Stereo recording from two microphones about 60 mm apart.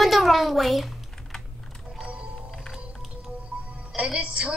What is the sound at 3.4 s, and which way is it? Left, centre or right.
Music, centre.